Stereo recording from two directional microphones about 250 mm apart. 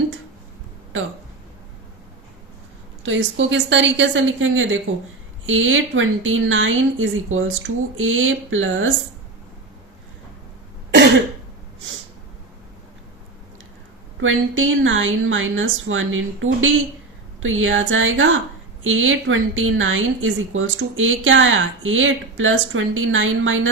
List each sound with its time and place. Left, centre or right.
3.0 s a woman's voice: right
14.2 s a woman's voice: right